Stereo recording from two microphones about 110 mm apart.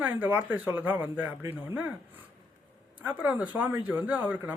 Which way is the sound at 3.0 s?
15° right (ahead or behind).